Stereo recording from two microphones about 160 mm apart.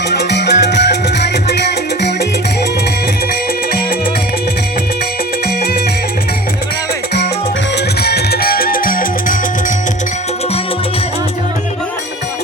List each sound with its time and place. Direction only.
0.1 s music: 90° left
8.0 s music: 85° left; by 9.7 s 60° left (ahead or behind)